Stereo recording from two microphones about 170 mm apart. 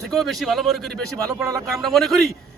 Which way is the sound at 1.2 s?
20° right (ahead or behind).